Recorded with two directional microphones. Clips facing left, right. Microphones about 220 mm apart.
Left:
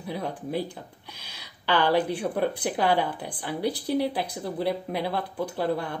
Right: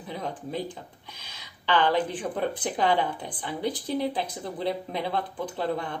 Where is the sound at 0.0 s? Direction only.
10° left (ahead or behind).